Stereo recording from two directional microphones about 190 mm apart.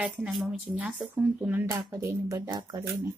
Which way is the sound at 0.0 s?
Centre (ahead or behind).